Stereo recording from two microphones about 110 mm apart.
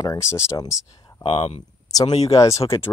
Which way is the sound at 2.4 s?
30° left (ahead or behind).